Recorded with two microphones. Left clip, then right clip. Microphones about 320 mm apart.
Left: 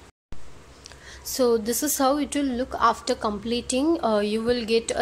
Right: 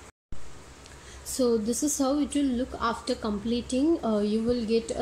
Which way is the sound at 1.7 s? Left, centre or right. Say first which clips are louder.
Left 4 dB; left.